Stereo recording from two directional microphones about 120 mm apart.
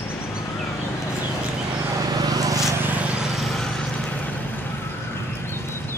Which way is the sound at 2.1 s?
35° right (ahead or behind).